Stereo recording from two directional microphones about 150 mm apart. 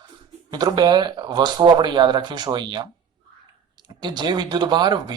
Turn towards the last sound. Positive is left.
turn(degrees=-30)  # may be behind; listen again after turning